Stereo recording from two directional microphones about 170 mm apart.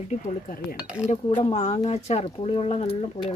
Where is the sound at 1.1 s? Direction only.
40° left (ahead or behind).